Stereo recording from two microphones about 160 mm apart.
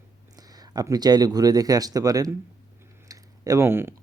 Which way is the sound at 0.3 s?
25° right (ahead or behind).